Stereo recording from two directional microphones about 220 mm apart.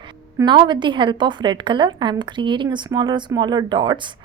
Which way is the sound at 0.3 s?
20° right (ahead or behind).